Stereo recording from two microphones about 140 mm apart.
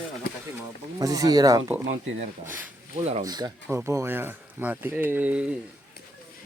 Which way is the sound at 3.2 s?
30° right (ahead or behind).